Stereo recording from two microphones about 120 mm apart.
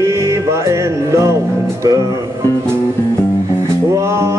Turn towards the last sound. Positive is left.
turn(degrees=-25)  # may be behind; listen again after turning